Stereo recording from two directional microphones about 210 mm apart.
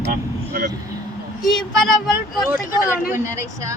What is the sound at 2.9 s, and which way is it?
Speech, 10° right (ahead or behind).